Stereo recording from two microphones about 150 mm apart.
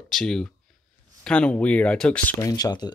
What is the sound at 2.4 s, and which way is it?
Speech, 25° left (ahead or behind).